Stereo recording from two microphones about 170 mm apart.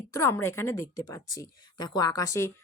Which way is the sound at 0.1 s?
15° left (ahead or behind).